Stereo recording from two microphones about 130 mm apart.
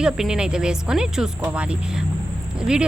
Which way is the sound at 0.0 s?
5° right (ahead or behind).